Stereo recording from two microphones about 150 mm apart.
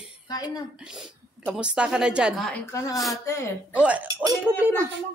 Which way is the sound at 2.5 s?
20° left (ahead or behind).